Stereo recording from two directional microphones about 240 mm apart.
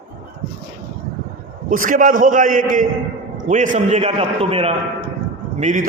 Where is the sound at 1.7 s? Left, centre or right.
Right.